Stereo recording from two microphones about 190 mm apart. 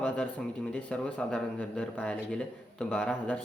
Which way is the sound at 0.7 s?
5° left (ahead or behind).